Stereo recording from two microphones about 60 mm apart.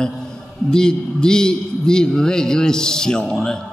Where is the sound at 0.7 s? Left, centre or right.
Centre.